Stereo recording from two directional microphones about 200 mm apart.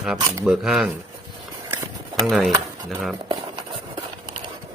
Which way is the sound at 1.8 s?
15° right (ahead or behind).